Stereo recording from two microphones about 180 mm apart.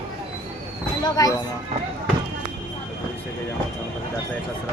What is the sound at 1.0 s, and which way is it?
Speech, 20° left (ahead or behind).